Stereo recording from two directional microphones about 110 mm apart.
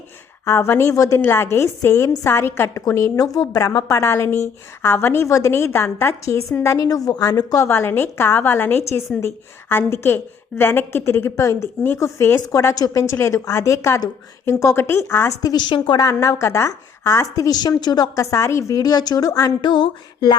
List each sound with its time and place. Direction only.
0.4 s a woman's voice: 25° left (ahead or behind)
15.4 s a woman's voice: 40° left (ahead or behind)
16.0 s a woman's voice: 30° left (ahead or behind)